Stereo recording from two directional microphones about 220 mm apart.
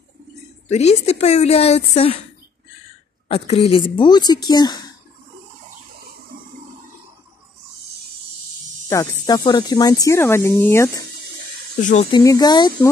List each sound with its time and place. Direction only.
0.7 s speech: 30° left (ahead or behind)
3.3 s speech: 30° left (ahead or behind)
6.3 s toilet flush: 40° right (ahead or behind)
8.8 s speech: 15° left (ahead or behind)
11.7 s speech: 35° left (ahead or behind)
12.2 s speech: 15° left (ahead or behind)